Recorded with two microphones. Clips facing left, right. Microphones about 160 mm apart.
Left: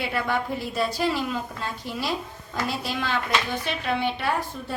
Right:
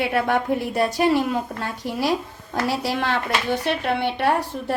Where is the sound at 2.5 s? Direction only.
75° right (ahead or behind).